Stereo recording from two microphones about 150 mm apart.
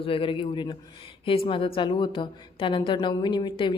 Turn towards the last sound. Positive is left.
turn(degrees=30)  # may be behind; listen again after turning